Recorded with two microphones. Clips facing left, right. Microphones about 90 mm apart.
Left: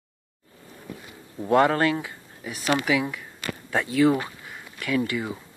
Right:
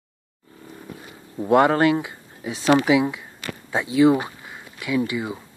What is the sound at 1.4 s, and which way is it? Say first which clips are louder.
Speech: right 3 dB; 15° right (ahead or behind).